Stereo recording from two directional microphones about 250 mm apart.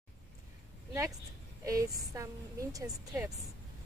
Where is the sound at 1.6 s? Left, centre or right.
Centre.